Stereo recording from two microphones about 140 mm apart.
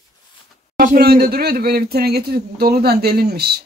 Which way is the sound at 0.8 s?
90° right.